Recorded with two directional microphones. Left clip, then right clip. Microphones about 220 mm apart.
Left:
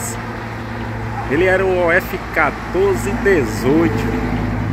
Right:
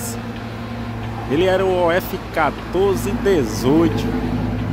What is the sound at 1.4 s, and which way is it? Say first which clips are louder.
Speech: left 2 dB; 15° right (ahead or behind).